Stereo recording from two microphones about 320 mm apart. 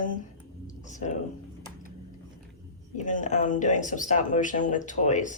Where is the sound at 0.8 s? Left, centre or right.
Left.